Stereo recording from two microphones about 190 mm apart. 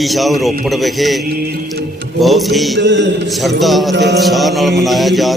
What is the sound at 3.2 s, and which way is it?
Speech, centre (ahead or behind).